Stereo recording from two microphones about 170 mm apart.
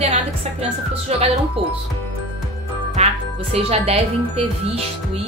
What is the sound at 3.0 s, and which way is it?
A woman's voice, 40° right (ahead or behind).